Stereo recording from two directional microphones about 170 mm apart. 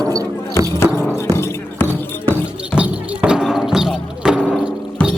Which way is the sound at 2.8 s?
5° right (ahead or behind).